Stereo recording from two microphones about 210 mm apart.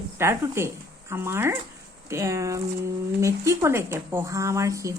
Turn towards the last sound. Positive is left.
turn(degrees=-15)  # may be behind; listen again after turning